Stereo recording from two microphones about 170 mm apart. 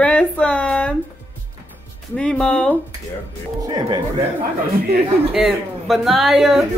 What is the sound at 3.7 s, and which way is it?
Speech, 25° right (ahead or behind).